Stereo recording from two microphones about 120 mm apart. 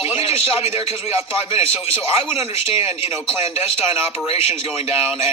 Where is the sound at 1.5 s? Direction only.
55° left (ahead or behind).